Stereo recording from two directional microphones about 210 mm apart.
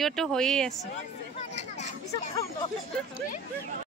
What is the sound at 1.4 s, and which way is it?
Speech, 35° left (ahead or behind).